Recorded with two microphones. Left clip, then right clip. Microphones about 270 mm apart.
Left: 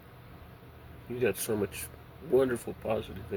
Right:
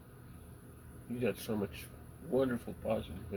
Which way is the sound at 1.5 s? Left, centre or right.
Left.